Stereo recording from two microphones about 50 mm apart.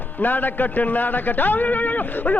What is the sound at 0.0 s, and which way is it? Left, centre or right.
Speech, left.